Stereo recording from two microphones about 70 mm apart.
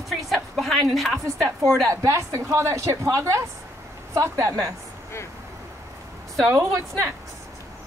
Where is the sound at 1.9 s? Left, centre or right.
Right.